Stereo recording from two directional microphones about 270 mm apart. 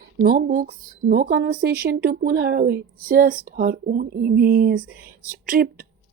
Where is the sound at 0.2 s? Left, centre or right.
Right.